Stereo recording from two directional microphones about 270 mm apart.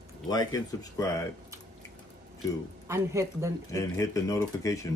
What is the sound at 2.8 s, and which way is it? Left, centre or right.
Speech, centre.